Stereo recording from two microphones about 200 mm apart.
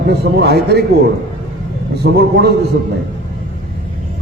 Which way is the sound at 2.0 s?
55° right (ahead or behind).